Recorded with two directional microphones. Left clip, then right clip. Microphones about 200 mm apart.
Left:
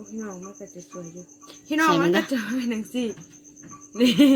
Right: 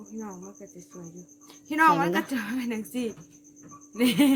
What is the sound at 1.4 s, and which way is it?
Cricket, 25° right (ahead or behind).